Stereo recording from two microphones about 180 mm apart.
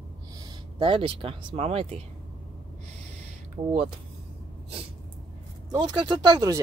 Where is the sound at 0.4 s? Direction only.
30° right (ahead or behind).